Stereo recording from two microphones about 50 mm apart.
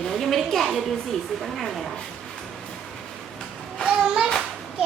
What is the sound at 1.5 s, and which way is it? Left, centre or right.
Speech, centre.